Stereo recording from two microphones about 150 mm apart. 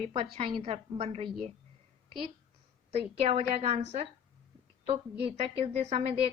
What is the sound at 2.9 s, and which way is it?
A woman's voice, 40° right (ahead or behind).